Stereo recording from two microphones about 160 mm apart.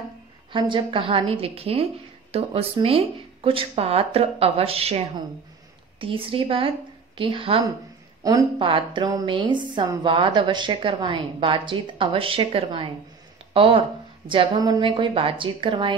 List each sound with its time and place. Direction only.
0.5 s a woman's voice: 30° right (ahead or behind)
8.2 s a woman's voice: 20° right (ahead or behind)